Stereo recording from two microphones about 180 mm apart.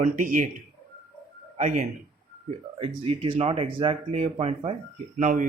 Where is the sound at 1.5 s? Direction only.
40° right (ahead or behind).